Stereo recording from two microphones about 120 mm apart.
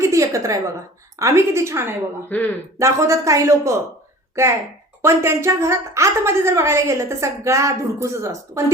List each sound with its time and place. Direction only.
0.0 s a woman's voice: 25° right (ahead or behind)
2.3 s a man's voice: 15° left (ahead or behind)
2.7 s a woman's voice: 25° right (ahead or behind)
5.0 s a woman's voice: 20° right (ahead or behind)